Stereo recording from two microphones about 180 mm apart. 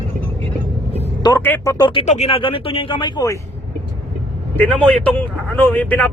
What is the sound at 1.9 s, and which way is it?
Speech, 35° left (ahead or behind).